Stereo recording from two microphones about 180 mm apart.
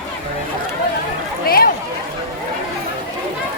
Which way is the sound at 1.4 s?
55° left (ahead or behind).